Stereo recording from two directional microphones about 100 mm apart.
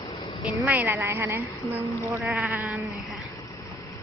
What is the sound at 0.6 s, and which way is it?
Speech, 20° right (ahead or behind).